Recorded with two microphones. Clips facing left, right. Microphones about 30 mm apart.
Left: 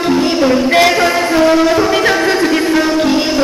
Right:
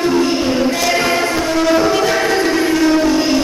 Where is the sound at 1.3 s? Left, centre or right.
Left.